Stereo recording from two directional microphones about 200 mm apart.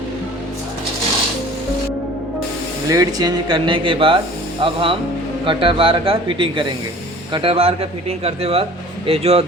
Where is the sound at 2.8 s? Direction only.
15° right (ahead or behind).